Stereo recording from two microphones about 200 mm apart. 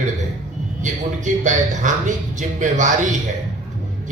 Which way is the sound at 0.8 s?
40° right (ahead or behind).